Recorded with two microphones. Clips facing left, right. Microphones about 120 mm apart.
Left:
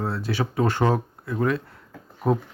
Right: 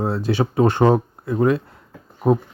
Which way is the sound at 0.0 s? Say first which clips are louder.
Right 6 dB; 20° right (ahead or behind).